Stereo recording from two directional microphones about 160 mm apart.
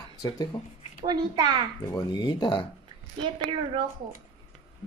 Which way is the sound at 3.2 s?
30° right (ahead or behind).